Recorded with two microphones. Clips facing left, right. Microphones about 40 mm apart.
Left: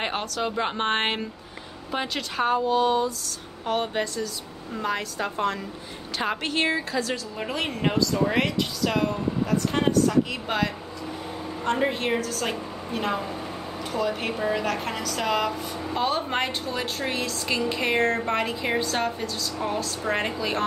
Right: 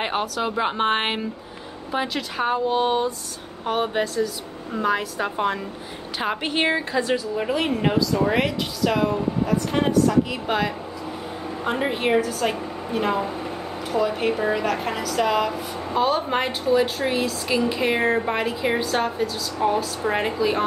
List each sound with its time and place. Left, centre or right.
0.0 s a woman's voice: centre
2.7 s mantra: right
3.6 s a woman's voice: centre
7.3 s a woman's voice: centre